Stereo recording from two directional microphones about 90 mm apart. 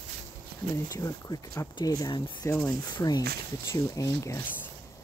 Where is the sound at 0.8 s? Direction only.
40° left (ahead or behind).